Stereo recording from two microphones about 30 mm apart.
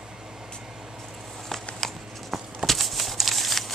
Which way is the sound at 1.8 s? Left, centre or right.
Centre.